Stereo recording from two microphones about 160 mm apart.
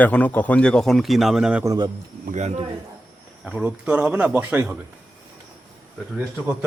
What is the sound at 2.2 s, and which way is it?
Speech, 50° right (ahead or behind).